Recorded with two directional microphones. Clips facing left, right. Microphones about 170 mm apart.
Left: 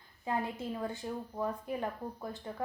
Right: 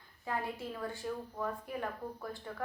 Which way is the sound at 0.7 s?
20° left (ahead or behind).